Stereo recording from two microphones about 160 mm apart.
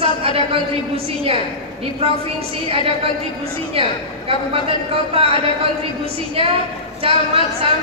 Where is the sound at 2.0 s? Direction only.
40° right (ahead or behind).